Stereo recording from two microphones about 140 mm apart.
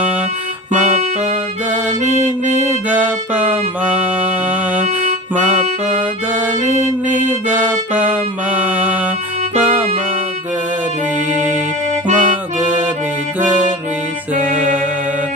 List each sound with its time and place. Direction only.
0.7 s music: 60° right (ahead or behind)
2.9 s music: 10° right (ahead or behind)
7.1 s music: 10° right (ahead or behind)
12.0 s accordion: 65° right (ahead or behind)
14.3 s music: 70° right (ahead or behind)